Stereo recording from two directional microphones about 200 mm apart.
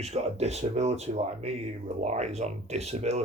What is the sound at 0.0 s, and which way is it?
Speech, 35° right (ahead or behind).